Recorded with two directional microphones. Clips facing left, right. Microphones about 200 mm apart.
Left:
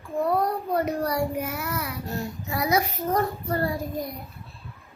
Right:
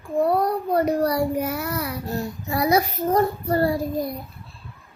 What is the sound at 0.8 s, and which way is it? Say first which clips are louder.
A woman's voice: right 5 dB; 35° right (ahead or behind).